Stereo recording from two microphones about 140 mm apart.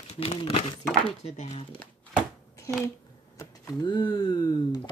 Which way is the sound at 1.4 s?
50° left (ahead or behind).